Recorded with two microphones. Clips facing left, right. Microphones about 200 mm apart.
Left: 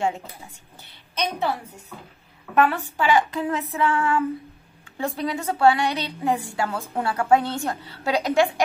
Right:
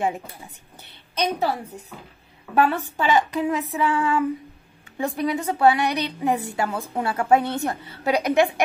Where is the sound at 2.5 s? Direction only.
25° right (ahead or behind).